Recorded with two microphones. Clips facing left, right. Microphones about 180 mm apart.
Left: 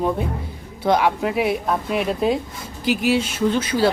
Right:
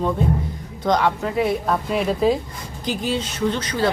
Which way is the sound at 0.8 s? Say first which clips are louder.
Left 1 dB; 10° left (ahead or behind).